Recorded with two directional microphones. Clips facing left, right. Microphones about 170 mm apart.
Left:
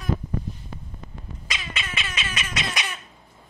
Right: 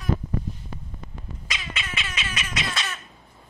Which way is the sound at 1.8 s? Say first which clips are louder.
Left 1 dB; 45° left (ahead or behind).